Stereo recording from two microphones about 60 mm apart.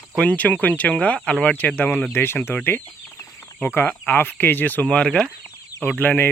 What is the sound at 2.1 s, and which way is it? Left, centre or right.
Speech, left.